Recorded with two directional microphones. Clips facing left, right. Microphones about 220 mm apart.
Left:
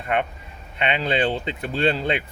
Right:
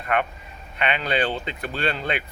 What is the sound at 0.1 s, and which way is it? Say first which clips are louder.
Speech: even; 25° left (ahead or behind).